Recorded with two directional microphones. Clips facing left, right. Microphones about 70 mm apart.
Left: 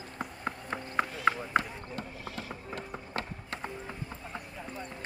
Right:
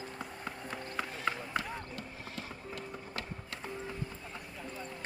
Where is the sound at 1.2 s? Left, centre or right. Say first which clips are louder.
Left 7 dB; left.